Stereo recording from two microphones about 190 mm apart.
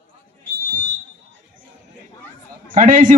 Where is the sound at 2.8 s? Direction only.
45° right (ahead or behind).